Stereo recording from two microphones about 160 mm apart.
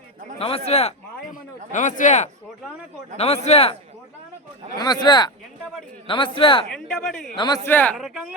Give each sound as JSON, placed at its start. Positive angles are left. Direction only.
{"t": 0.3, "sound": "a man's voice", "side_deg": 40}
{"t": 1.2, "sound": "a sound", "side_deg": 55}
{"t": 3.2, "sound": "a man's voice", "side_deg": 40}
{"t": 4.8, "sound": "a man's voice", "side_deg": 25}
{"t": 6.7, "sound": "speech", "side_deg": 5}
{"t": 7.3, "sound": "speech", "side_deg": 25}
{"t": 7.6, "sound": "speech", "side_deg": 10}
{"t": 7.9, "sound": "speech", "side_deg": -5}